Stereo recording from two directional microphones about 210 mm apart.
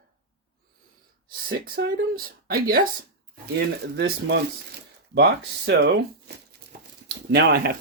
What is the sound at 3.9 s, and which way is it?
Speech, 50° right (ahead or behind).